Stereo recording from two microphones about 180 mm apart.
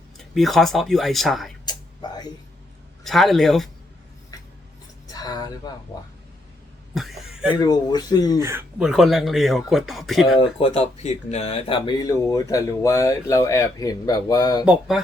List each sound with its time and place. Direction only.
0.2 s speech: centre (ahead or behind)
1.6 s whispering: 25° left (ahead or behind)
3.0 s speech: centre (ahead or behind)
5.0 s speech: 20° left (ahead or behind)
6.9 s cough: centre (ahead or behind)
7.6 s speech: 20° left (ahead or behind)
8.4 s speech: 15° right (ahead or behind)
8.8 s speech: centre (ahead or behind)
10.3 s speech: 30° left (ahead or behind)
14.6 s speech: 5° right (ahead or behind)